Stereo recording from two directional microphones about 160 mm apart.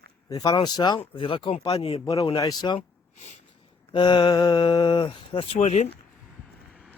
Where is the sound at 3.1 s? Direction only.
45° left (ahead or behind).